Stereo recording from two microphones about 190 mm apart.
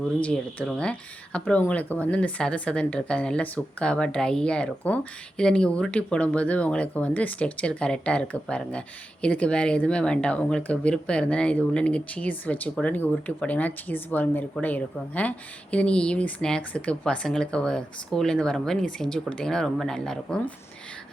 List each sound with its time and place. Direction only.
0.2 s speech: 5° left (ahead or behind)